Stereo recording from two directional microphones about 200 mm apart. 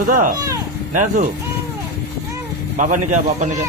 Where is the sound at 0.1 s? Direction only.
40° right (ahead or behind).